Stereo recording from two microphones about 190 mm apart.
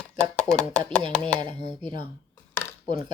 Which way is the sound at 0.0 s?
5° left (ahead or behind).